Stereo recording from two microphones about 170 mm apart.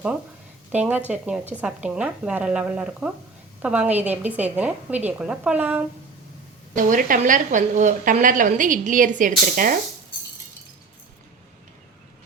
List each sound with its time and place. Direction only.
0.7 s a woman's voice: 10° right (ahead or behind)
6.7 s speech: 50° right (ahead or behind)